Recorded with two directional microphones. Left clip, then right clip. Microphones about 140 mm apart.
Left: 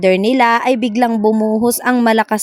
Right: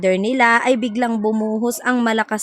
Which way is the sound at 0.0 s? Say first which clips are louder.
Left 4 dB; 40° left (ahead or behind).